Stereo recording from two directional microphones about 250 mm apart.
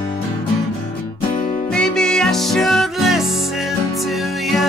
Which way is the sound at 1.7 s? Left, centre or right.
Centre.